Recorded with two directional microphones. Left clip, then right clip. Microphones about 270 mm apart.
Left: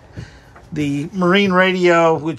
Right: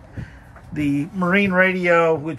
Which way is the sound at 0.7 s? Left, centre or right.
Centre.